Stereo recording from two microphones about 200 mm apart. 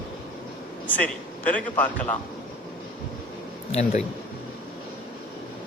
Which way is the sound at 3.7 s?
30° left (ahead or behind).